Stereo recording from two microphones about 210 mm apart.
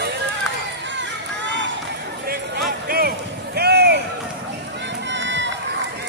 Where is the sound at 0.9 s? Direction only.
60° right (ahead or behind).